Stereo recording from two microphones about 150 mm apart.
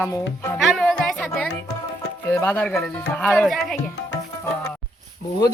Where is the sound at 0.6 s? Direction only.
Centre (ahead or behind).